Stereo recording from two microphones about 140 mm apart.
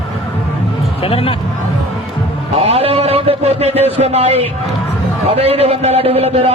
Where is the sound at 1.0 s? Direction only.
45° left (ahead or behind).